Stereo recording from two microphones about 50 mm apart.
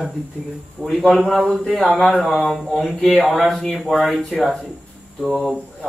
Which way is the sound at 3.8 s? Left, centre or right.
Centre.